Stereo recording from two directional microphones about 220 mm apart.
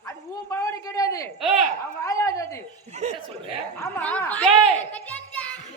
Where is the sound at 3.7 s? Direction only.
10° left (ahead or behind).